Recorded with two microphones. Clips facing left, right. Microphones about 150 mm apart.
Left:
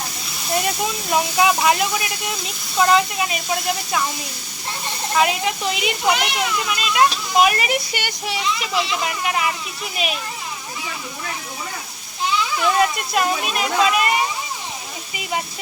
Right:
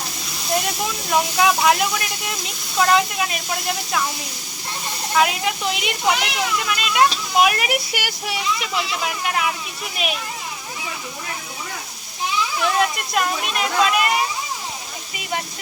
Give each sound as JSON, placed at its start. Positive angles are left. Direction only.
{"t": 0.5, "sound": "speech", "side_deg": 0}
{"t": 5.1, "sound": "speech", "side_deg": 0}
{"t": 12.8, "sound": "speech", "side_deg": 0}